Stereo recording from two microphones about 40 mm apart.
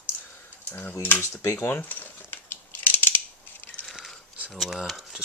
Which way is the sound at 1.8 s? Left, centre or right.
Left.